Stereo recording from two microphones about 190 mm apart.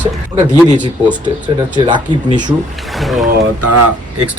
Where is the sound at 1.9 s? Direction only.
25° right (ahead or behind).